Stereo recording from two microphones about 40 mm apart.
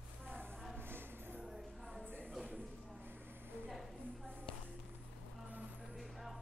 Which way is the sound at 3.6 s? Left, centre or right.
Centre.